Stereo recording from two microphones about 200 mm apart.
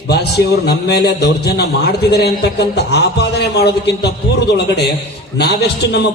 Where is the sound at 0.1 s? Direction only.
55° left (ahead or behind).